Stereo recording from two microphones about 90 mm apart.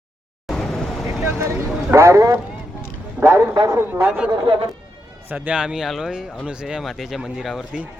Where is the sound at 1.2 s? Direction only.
35° right (ahead or behind).